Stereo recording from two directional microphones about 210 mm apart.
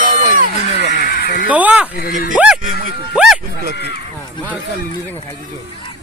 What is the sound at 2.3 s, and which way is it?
Speech, 5° right (ahead or behind).